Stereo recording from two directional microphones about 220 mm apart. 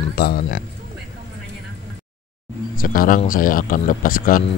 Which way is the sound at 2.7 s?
40° left (ahead or behind).